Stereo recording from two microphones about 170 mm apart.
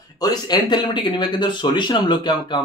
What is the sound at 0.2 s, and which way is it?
Speech, 25° left (ahead or behind).